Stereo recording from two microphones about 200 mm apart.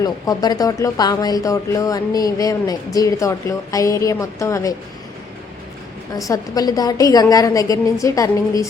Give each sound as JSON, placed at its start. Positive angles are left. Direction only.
{"t": 0.0, "sound": "speech", "side_deg": 20}
{"t": 6.1, "sound": "speech", "side_deg": 15}